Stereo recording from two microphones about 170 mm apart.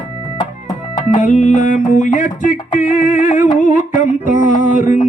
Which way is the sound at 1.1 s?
45° left (ahead or behind).